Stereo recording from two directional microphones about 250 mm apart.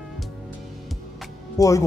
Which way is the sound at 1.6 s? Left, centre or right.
Centre.